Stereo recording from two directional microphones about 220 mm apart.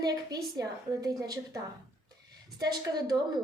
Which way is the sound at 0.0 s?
15° right (ahead or behind).